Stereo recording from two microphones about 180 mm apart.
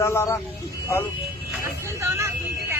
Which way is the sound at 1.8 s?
15° right (ahead or behind).